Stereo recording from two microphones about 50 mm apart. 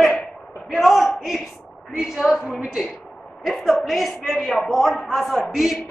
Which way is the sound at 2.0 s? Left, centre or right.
Centre.